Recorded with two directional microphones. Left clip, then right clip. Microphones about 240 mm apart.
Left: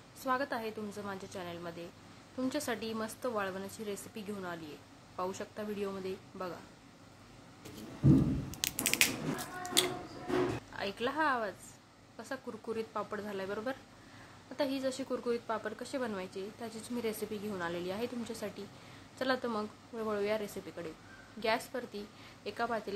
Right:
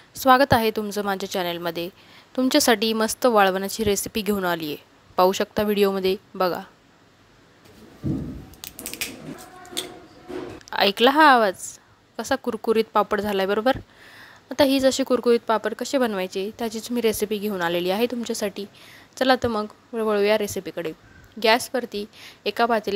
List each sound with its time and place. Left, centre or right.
0.2 s speech: right
8.5 s a sound: centre
10.7 s speech: right